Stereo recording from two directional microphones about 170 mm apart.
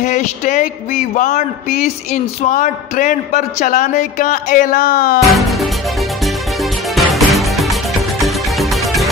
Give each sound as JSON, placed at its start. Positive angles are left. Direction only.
{"t": 0.0, "sound": "speech", "side_deg": 45}
{"t": 6.2, "sound": "music", "side_deg": 0}